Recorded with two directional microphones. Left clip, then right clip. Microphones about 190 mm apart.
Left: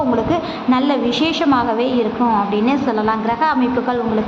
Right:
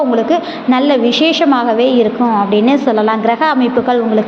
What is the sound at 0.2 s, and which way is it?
A woman's voice, 10° right (ahead or behind).